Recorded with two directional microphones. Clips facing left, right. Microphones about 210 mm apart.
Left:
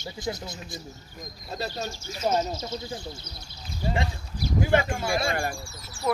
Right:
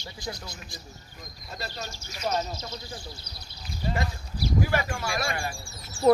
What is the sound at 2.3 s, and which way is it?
Speech, 25° left (ahead or behind).